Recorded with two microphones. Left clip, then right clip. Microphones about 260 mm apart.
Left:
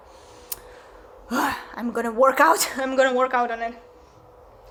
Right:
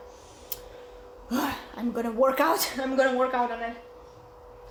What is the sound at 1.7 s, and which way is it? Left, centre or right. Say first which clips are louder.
Speech: left 4 dB; left.